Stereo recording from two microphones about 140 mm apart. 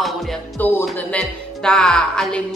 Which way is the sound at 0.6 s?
15° left (ahead or behind).